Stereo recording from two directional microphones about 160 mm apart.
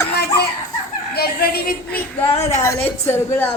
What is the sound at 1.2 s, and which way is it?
Speech, 75° left (ahead or behind).